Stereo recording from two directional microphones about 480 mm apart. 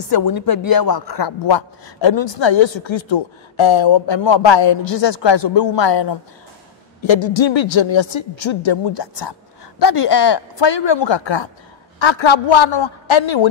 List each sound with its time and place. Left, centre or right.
0.0 s a man's voice: left